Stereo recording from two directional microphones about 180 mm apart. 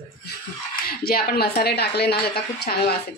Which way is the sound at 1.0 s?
60° left (ahead or behind).